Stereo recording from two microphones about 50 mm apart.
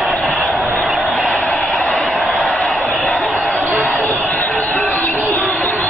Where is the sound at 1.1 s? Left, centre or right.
Left.